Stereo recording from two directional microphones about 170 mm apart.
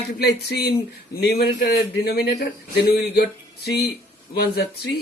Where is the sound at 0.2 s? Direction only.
75° left (ahead or behind).